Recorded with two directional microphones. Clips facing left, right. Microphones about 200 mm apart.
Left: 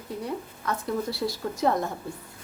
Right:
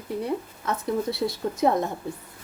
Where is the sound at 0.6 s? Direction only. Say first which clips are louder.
Right 2 dB; 25° right (ahead or behind).